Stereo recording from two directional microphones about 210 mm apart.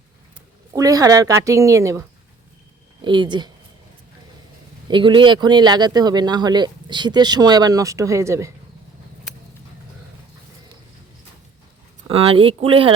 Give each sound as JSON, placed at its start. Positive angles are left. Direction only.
{"t": 0.7, "sound": "a woman's voice", "side_deg": -15}
{"t": 4.9, "sound": "speech", "side_deg": -20}
{"t": 12.0, "sound": "speech", "side_deg": -25}